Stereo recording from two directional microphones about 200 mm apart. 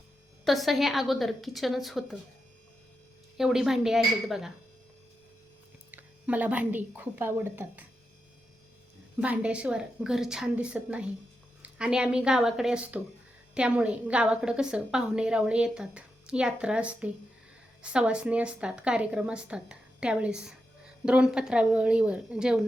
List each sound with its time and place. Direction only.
0.4 s a woman's voice: centre (ahead or behind)
3.3 s a woman's voice: centre (ahead or behind)
5.9 s speech: 10° right (ahead or behind)
9.2 s a woman's voice: 5° right (ahead or behind)